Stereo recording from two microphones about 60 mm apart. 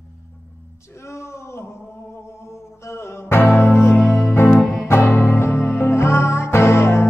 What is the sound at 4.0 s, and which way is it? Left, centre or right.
Music, centre.